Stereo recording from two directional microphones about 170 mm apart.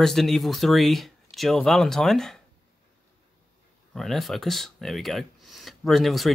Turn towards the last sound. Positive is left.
turn(degrees=0)  # may be behind; listen again after turning